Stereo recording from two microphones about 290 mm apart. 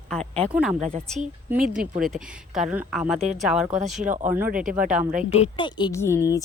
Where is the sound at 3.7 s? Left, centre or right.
Right.